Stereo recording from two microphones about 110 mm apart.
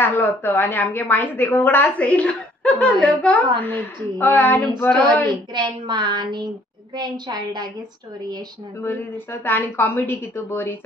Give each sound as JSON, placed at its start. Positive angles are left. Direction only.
{"t": 0.0, "sound": "a woman's voice", "side_deg": 20}
{"t": 5.5, "sound": "a woman's voice", "side_deg": -45}
{"t": 8.8, "sound": "a woman's voice", "side_deg": 20}